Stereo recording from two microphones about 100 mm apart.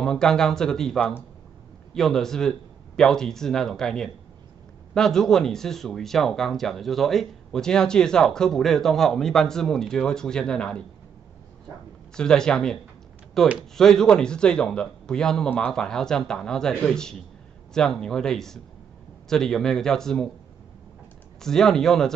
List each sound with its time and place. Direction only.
0.0 s speech: 5° left (ahead or behind)
12.2 s speech: 5° left (ahead or behind)
21.4 s speech: 5° left (ahead or behind)